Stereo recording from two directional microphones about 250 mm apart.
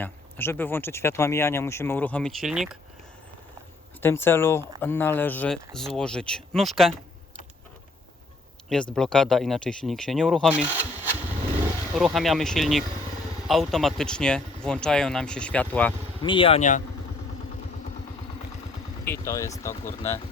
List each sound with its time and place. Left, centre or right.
0.0 s speech: centre
4.0 s speech: centre
8.7 s speech: centre
16.2 s speech: left
19.0 s speech: centre
19.8 s speech: left